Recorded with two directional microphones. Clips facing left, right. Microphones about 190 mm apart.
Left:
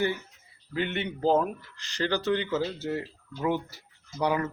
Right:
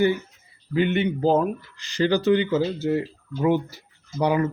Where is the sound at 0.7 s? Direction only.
10° right (ahead or behind).